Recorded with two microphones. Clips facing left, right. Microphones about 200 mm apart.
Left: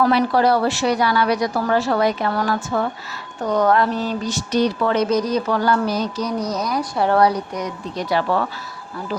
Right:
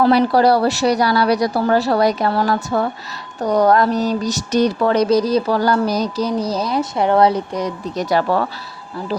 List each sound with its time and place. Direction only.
0.0 s speech: 35° right (ahead or behind)
7.9 s speech: 40° right (ahead or behind)